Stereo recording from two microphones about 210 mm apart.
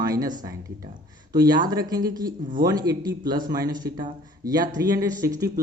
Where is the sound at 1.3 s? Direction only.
20° right (ahead or behind).